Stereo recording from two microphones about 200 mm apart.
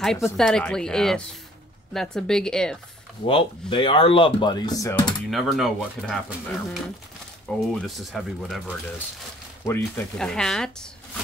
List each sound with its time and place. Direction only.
0.0 s speech: centre (ahead or behind)
3.3 s speech: 25° left (ahead or behind)
5.3 s speech: centre (ahead or behind)